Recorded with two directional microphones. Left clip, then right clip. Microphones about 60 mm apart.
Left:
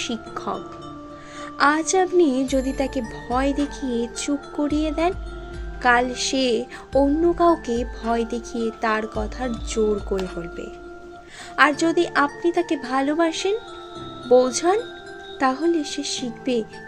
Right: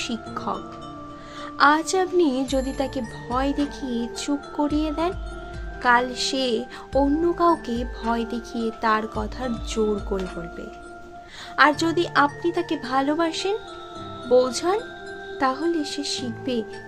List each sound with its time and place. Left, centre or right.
0.4 s speech: left
1.4 s a woman's voice: left; by 2.6 s centre
2.6 s speech: left
7.0 s speech: left
7.7 s speech: left
9.1 s speech: left
11.7 s speech: centre; by 16.6 s left